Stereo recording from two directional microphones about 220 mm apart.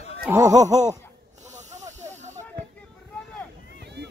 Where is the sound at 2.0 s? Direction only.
30° right (ahead or behind).